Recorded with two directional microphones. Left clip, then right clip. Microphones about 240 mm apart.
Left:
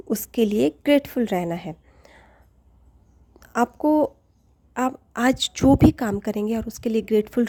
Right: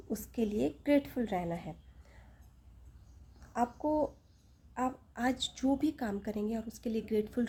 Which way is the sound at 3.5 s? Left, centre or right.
Left.